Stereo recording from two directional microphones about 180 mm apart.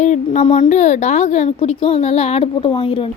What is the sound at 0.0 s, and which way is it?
A woman's voice, 40° left (ahead or behind).